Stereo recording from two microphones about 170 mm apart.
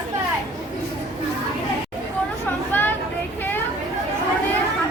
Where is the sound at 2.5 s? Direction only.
10° left (ahead or behind).